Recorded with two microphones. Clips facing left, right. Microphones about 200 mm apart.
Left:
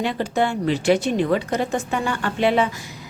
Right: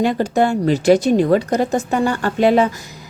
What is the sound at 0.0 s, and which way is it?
A woman's voice, 45° right (ahead or behind).